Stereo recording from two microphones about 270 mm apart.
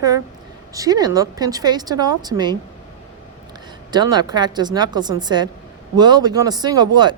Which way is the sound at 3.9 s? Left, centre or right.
Centre.